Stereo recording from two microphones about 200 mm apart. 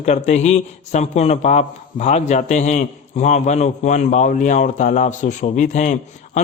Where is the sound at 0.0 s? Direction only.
35° left (ahead or behind).